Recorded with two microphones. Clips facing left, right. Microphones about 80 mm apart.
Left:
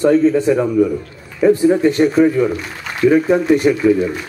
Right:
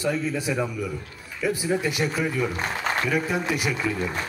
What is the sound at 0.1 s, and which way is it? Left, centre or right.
A man's voice, left.